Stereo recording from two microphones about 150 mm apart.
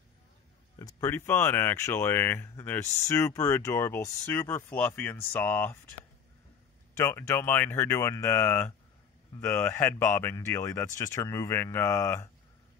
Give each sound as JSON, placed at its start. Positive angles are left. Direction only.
{"t": 0.7, "sound": "speech", "side_deg": 25}